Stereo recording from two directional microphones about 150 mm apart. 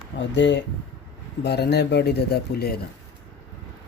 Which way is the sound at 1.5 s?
90° left.